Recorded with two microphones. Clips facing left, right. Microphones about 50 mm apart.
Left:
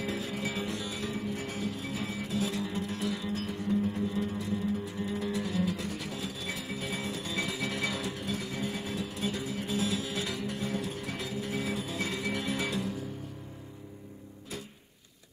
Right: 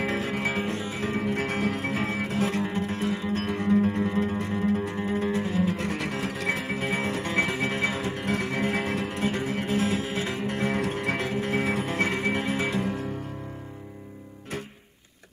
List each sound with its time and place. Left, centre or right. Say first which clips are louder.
0.0 s music: right 7 dB; right
1.2 s music: right 8 dB; right
3.4 s music: right 8 dB; right
5.8 s music: right 7 dB; right
8.2 s music: right 8 dB; right